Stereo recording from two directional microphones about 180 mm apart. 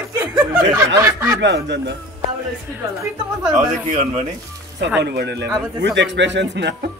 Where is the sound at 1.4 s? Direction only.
85° right.